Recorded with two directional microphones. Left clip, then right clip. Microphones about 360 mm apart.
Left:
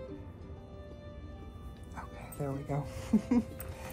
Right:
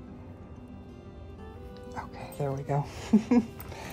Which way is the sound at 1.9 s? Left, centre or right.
Right.